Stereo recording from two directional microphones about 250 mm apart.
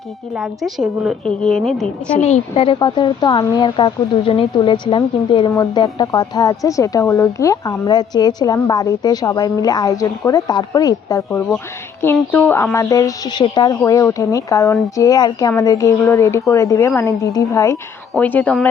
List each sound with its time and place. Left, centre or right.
0.6 s a woman's voice: centre
2.1 s a woman's voice: left; by 18.7 s centre